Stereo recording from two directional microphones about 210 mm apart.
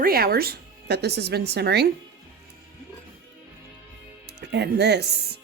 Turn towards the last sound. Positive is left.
turn(degrees=-50)  # may be behind; listen again after turning